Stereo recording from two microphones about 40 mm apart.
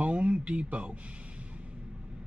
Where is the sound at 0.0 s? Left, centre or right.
Right.